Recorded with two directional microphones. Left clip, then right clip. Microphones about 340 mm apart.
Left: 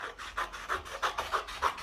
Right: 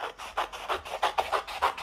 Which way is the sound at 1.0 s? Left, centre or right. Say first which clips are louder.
Right 6 dB; centre.